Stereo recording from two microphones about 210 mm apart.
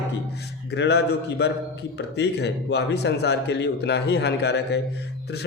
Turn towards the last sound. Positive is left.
turn(degrees=50)  # may be behind; listen again after turning